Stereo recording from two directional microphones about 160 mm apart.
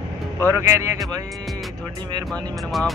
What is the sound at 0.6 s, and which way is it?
Speech, 15° right (ahead or behind).